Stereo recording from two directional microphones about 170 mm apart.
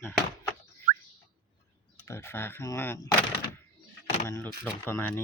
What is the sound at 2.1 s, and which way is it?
Speech, 15° left (ahead or behind).